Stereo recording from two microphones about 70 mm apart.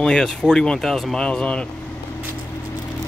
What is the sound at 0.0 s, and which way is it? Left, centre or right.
Speech, centre.